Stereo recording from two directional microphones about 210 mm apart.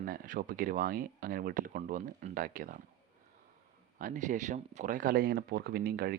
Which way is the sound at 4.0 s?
35° right (ahead or behind).